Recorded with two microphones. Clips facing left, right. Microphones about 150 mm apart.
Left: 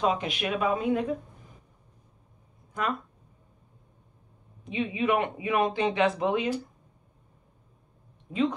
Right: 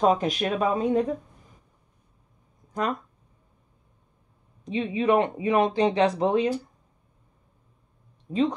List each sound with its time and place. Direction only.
0.0 s speech: 40° right (ahead or behind)
2.8 s speech: 40° right (ahead or behind)
4.6 s speech: 35° right (ahead or behind)
8.3 s speech: 35° right (ahead or behind)